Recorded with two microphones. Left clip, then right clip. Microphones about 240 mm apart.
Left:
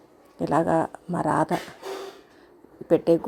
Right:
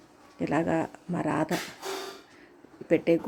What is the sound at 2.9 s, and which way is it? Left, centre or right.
Speech, centre.